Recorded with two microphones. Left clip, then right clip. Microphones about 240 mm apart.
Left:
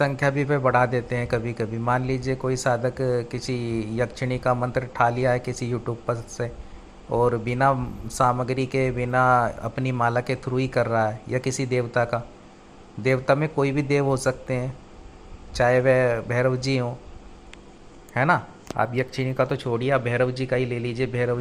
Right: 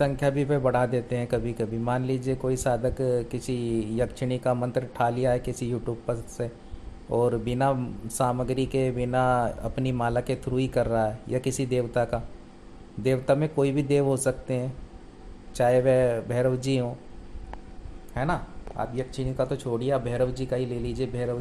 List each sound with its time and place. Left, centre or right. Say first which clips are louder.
0.0 s a man's voice: left 2 dB; centre
3.6 s speech: right 3 dB; centre
3.9 s a man's voice: left 2 dB; centre
18.1 s speech: left 8 dB; left